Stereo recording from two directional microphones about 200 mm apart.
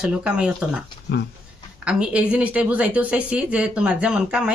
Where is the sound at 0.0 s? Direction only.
5° right (ahead or behind).